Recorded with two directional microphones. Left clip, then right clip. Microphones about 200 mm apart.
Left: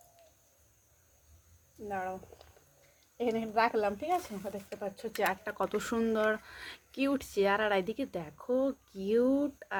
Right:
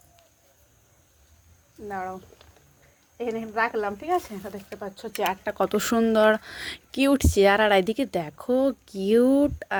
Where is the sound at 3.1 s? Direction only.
5° right (ahead or behind).